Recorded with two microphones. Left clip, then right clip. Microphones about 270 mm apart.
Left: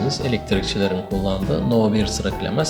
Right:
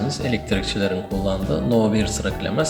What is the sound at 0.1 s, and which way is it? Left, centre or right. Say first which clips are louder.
Speech: left 1 dB; centre.